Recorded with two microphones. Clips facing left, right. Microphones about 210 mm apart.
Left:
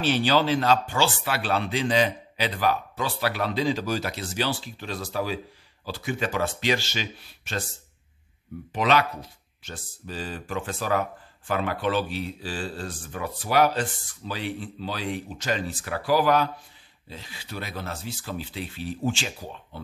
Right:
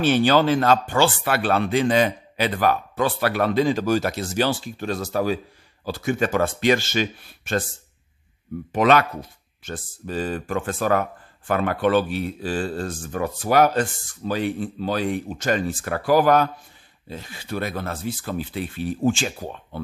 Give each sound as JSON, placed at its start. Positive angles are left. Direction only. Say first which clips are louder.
{"t": 0.0, "sound": "speech", "louder": "right 5 dB", "side_deg": -50}
{"t": 8.7, "sound": "speech", "louder": "right 5 dB", "side_deg": -50}